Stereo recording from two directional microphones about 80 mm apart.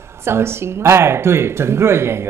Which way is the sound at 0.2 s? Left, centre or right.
Right.